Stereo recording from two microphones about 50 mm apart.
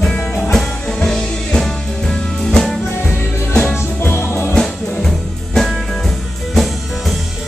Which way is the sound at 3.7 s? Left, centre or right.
Left.